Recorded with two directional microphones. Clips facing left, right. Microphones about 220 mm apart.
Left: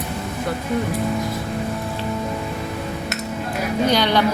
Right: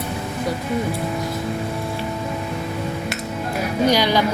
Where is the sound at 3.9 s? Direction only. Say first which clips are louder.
Right 1 dB; 10° right (ahead or behind).